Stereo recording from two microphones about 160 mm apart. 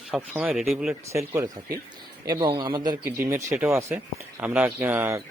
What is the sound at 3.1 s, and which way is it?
Speech, 15° right (ahead or behind).